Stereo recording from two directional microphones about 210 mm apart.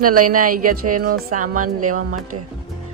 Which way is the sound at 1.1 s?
90° right.